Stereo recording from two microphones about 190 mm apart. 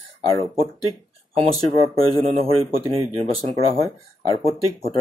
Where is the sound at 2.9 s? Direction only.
30° right (ahead or behind).